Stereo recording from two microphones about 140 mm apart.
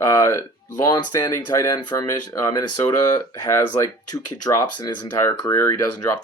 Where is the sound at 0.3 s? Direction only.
20° left (ahead or behind).